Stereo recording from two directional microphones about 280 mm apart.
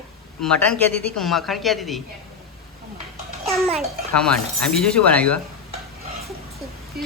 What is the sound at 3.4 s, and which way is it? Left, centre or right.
A child's voice, centre.